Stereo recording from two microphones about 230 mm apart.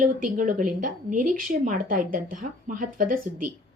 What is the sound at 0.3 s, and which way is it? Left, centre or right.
A woman's voice, right.